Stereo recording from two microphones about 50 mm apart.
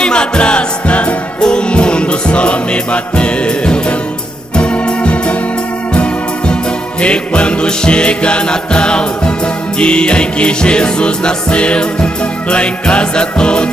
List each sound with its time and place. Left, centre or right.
0.0 s music: centre
4.6 s organ: left
5.9 s music: left